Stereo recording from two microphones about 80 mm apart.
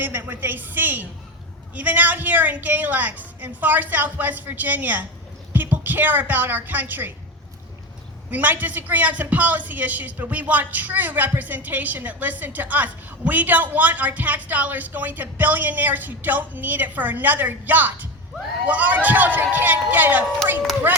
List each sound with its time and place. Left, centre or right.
0.0 s a woman's voice: right
8.3 s a woman's voice: right